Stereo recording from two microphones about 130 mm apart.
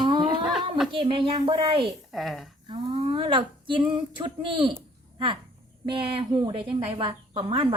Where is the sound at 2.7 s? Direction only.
45° right (ahead or behind).